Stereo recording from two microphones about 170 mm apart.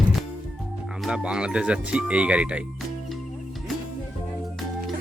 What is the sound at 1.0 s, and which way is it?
Speech, 5° right (ahead or behind).